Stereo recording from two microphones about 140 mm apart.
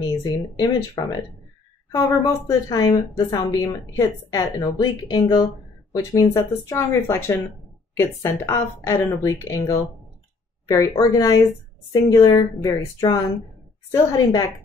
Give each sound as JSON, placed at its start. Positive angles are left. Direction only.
{"t": 0.2, "sound": "a woman's voice", "side_deg": 30}
{"t": 10.8, "sound": "a woman's voice", "side_deg": 25}